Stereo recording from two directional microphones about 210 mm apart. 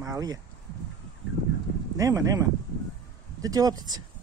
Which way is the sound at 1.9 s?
15° right (ahead or behind).